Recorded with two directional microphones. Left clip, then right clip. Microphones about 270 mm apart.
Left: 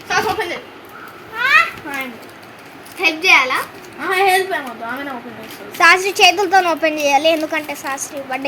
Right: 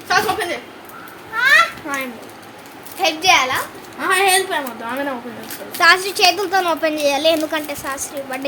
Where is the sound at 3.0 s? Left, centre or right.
Centre.